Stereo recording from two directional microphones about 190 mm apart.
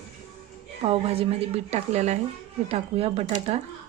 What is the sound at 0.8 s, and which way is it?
A woman's voice, 30° right (ahead or behind).